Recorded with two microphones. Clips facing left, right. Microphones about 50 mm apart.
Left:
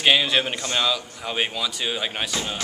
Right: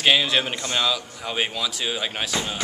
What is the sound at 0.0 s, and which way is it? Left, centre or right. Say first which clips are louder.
Speech: even; centre.